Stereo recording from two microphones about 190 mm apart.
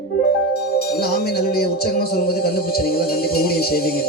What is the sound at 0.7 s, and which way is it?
A man's voice, 55° left (ahead or behind).